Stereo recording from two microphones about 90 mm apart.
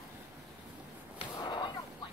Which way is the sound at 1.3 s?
55° left (ahead or behind).